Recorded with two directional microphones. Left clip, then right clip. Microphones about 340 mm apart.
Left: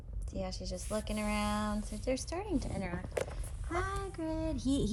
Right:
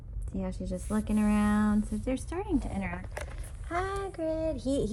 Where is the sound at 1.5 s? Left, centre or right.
Right.